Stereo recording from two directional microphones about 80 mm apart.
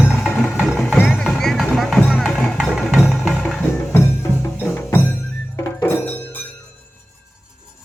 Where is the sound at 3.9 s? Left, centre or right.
Left.